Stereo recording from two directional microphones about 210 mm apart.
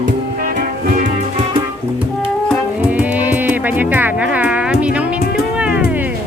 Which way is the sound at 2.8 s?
5° right (ahead or behind).